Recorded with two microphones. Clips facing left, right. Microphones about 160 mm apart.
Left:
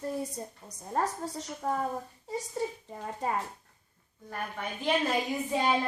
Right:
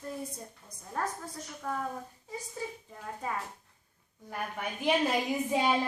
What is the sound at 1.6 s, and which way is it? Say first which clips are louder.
Speech: left 4 dB; 35° left (ahead or behind).